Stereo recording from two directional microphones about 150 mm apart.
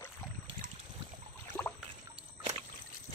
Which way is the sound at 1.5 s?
10° left (ahead or behind).